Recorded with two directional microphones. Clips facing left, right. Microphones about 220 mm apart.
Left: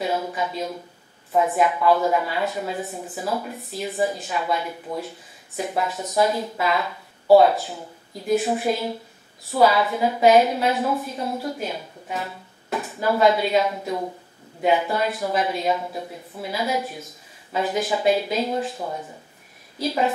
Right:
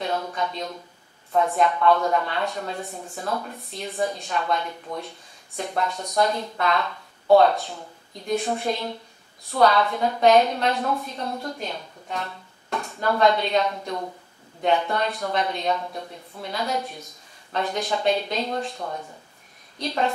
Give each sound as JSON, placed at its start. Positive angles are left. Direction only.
{"t": 0.0, "sound": "speech", "side_deg": 5}